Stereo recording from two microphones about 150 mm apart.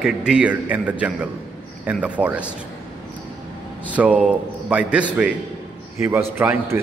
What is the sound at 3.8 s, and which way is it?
A man's voice, 10° right (ahead or behind).